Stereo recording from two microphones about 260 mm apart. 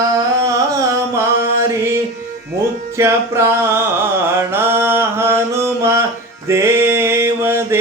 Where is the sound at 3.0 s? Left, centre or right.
Centre.